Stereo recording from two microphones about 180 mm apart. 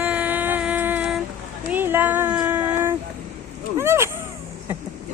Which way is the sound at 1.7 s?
10° right (ahead or behind).